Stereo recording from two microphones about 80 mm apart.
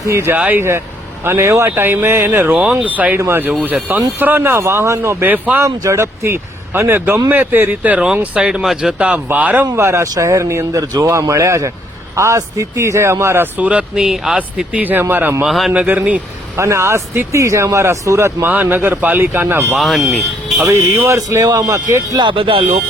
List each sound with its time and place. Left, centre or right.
0.0 s speech: right
2.5 s speech: centre
2.7 s speech: centre
3.2 s speech: right
9.7 s speech: right
13.6 s speech: centre
14.8 s speech: right
15.4 s a man's voice: centre
15.7 s speech: centre
16.6 s speech: right
18.4 s speech: right
19.7 s a man's voice: centre
20.7 s speech: right
22.1 s speech: right